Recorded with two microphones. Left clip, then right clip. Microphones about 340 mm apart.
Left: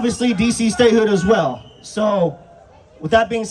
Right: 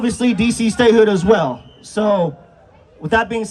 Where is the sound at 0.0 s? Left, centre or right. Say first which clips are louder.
Right 1 dB; centre.